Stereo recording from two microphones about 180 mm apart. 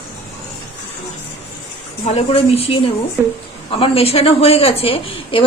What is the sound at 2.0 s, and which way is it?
A woman's voice, 35° left (ahead or behind).